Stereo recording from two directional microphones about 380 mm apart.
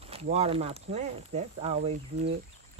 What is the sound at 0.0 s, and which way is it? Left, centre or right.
Speech, centre.